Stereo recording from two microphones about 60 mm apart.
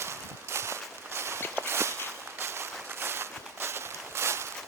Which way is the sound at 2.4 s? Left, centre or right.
Right.